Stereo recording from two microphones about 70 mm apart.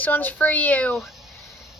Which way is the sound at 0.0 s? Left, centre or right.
Left.